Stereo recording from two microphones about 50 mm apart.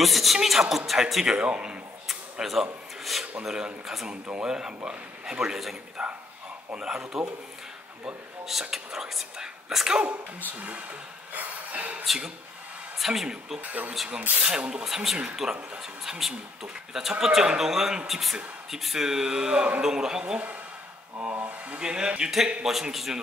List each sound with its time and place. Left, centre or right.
0.0 s a man's voice: centre
1.3 s speech: right
2.4 s a man's voice: centre
4.1 s a man's voice: right
8.5 s a man's voice: centre
11.3 s a sound: right
13.0 s a man's voice: centre
13.6 s a sound: right
14.4 s speech: centre
14.9 s a man's voice: centre
21.2 s a sound: right
21.7 s a man's voice: centre
22.7 s a man's voice: centre